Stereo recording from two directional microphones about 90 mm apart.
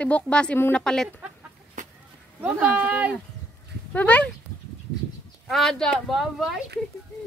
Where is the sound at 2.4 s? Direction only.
15° right (ahead or behind).